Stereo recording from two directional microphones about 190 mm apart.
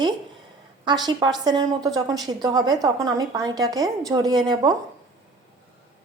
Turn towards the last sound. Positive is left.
turn(degrees=-20)  # may be behind; listen again after turning